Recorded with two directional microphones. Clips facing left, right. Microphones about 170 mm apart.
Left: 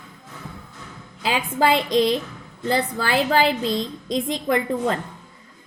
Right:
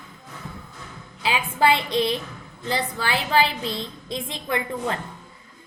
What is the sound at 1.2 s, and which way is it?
A woman's voice, 40° left (ahead or behind).